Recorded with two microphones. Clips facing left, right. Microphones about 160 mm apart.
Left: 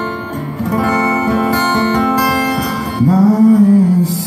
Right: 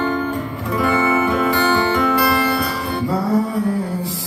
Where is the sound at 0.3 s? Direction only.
40° left (ahead or behind).